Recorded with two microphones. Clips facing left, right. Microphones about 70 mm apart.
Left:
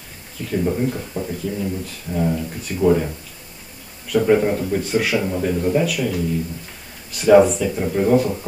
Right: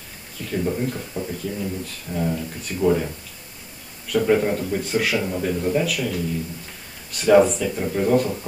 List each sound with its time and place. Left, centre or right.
0.4 s speech: centre
4.1 s speech: centre